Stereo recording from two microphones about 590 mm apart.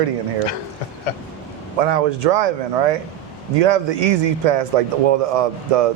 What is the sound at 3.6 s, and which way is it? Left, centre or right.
Speech, right.